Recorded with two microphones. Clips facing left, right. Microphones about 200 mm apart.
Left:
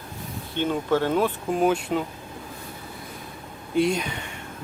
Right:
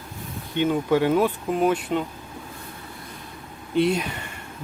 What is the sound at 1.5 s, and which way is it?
Speech, centre (ahead or behind).